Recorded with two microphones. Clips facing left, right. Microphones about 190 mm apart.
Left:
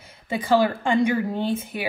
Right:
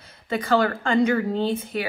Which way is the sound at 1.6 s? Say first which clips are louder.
Right 1 dB; 25° left (ahead or behind).